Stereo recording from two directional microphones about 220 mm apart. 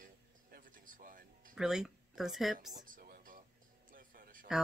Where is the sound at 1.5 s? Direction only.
5° right (ahead or behind).